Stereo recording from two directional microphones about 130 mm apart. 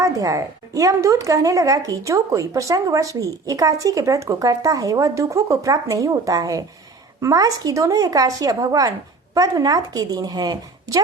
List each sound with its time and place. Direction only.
0.0 s a woman's voice: 25° right (ahead or behind)